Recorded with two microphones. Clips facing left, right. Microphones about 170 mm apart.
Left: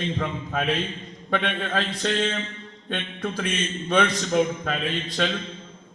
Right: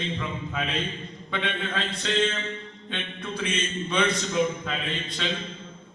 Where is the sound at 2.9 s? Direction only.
50° left (ahead or behind).